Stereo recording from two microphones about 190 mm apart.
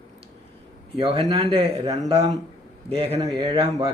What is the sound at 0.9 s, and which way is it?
Speech, 30° right (ahead or behind).